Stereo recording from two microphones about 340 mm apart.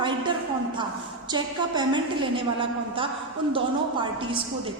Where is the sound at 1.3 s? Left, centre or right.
Centre.